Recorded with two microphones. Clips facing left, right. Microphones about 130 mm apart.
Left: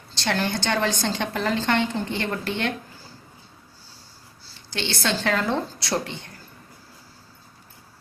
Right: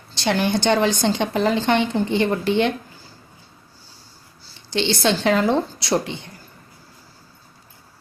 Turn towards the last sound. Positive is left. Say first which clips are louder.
# right 5 dB
turn(degrees=-20)  # may be behind; listen again after turning